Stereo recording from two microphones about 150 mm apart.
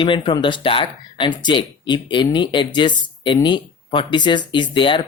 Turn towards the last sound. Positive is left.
turn(degrees=35)  # may be behind; listen again after turning